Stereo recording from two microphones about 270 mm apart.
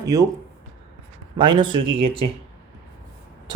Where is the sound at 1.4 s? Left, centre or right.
Centre.